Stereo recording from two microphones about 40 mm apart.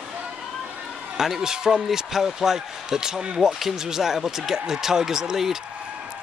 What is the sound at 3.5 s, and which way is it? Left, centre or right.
Speech, centre.